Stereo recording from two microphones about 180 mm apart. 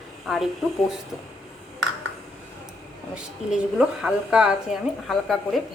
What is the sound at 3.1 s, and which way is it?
A woman's voice, 5° right (ahead or behind).